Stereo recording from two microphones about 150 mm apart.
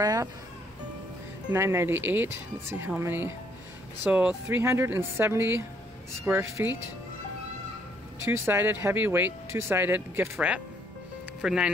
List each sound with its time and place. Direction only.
0.0 s music: 25° right (ahead or behind)
1.5 s speech: 15° right (ahead or behind)
8.3 s speech: 15° right (ahead or behind)